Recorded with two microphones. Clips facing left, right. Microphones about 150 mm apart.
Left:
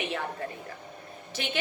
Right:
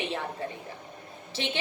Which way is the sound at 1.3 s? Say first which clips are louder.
Right 1 dB; 30° right (ahead or behind).